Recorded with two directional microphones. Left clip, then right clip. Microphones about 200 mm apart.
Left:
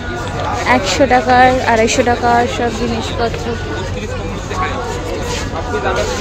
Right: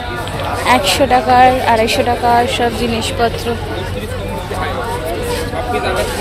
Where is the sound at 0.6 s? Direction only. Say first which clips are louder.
Right 1 dB; 10° left (ahead or behind).